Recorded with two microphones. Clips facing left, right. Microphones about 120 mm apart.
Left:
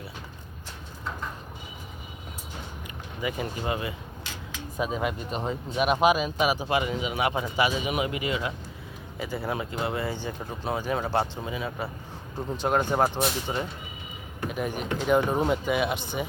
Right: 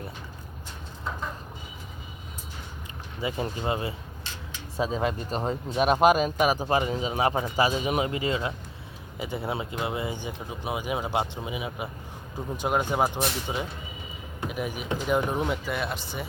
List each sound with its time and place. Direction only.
3.2 s speech: 30° right (ahead or behind)
12.6 s speech: 5° right (ahead or behind)